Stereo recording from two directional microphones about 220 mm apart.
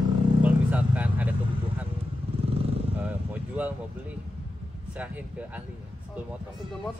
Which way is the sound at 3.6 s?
5° right (ahead or behind).